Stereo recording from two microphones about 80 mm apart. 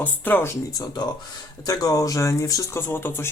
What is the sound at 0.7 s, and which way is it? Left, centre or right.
Speech, left.